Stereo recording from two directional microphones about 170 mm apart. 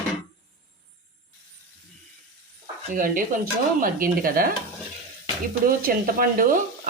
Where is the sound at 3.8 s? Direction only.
55° right (ahead or behind).